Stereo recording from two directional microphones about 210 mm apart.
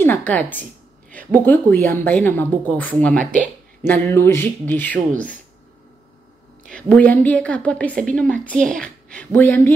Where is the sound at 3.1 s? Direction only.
40° right (ahead or behind).